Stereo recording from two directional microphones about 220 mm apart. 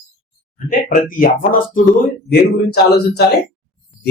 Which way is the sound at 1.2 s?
35° left (ahead or behind).